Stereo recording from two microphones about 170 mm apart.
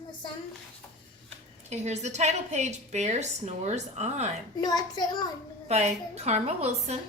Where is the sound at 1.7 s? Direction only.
40° right (ahead or behind).